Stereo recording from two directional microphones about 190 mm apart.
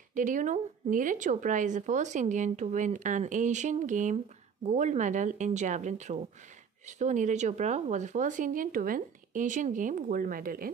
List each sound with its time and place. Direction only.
0.1 s a woman's voice: 45° right (ahead or behind)